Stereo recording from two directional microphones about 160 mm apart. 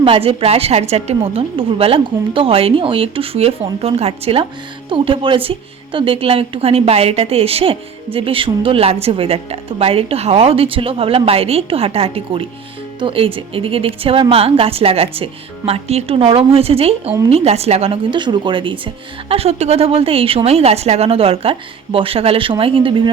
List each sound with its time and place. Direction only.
0.0 s a woman's voice: 35° right (ahead or behind)